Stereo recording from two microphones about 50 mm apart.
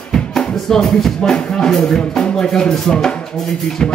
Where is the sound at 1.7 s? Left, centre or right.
Centre.